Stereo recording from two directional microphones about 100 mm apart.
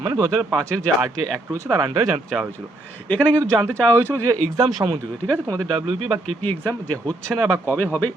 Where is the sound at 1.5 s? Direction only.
30° right (ahead or behind).